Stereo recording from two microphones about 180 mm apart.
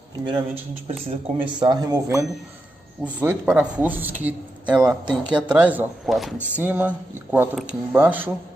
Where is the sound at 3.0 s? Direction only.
10° right (ahead or behind).